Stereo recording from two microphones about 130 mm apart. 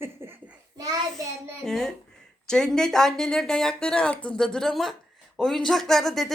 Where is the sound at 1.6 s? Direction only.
5° left (ahead or behind).